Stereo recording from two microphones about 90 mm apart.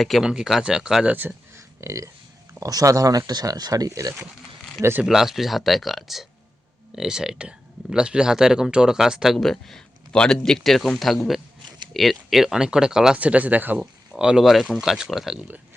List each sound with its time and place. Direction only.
0.0 s speech: centre (ahead or behind)
1.1 s a sound: 20° right (ahead or behind)
1.8 s speech: 35° right (ahead or behind)
4.8 s speech: 25° right (ahead or behind)
5.0 s speech: 5° right (ahead or behind); by 13.8 s 20° right (ahead or behind)
14.1 s speech: 10° right (ahead or behind)